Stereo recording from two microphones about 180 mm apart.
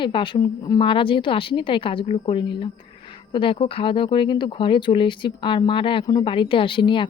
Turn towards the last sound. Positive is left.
turn(degrees=25)  # may be behind; listen again after turning